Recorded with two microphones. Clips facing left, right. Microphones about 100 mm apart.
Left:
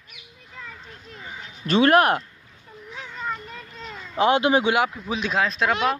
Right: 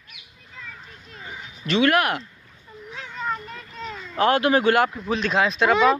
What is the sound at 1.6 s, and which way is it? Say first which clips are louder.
Speech: left 3 dB; 35° left (ahead or behind).